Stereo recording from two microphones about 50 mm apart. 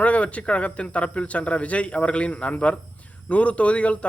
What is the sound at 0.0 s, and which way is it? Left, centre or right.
Speech, left.